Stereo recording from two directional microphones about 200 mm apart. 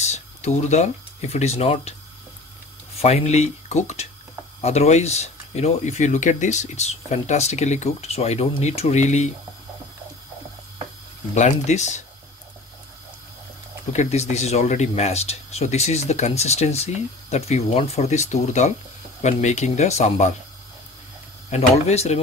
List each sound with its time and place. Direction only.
0.0 s speech: 35° left (ahead or behind)
3.0 s speech: 30° left (ahead or behind)
11.3 s speech: 35° left (ahead or behind)
13.9 s speech: 35° left (ahead or behind)
21.5 s speech: 30° left (ahead or behind)